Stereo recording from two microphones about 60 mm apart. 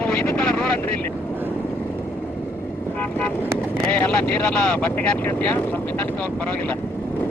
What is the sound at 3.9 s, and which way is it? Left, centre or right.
Speech, left.